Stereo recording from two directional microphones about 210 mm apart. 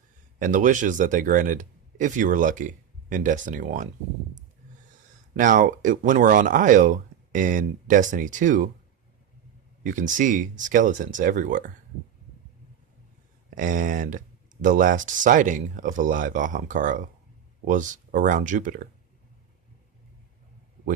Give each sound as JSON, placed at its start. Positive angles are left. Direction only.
{"t": 0.3, "sound": "speech", "side_deg": -40}
{"t": 5.4, "sound": "speech", "side_deg": -40}
{"t": 10.1, "sound": "speech", "side_deg": -40}
{"t": 13.6, "sound": "speech", "side_deg": -40}